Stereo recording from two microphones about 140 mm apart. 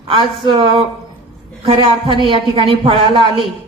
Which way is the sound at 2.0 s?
35° right (ahead or behind).